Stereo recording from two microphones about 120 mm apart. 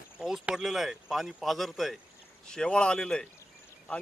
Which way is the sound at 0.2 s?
5° right (ahead or behind).